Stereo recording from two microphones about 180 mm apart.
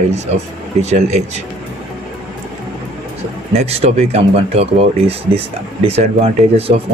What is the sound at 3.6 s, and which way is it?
Speech, 35° right (ahead or behind).